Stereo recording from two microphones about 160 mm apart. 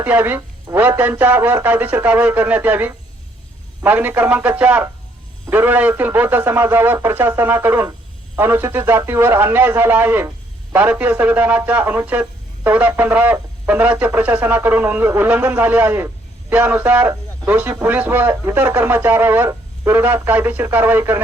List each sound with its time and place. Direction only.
0.0 s speech: 10° right (ahead or behind)